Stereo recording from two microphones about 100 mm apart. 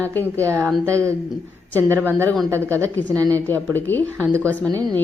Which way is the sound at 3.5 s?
15° left (ahead or behind).